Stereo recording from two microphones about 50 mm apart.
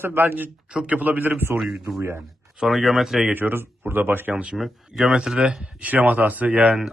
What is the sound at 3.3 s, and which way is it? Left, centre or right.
A man's voice, right.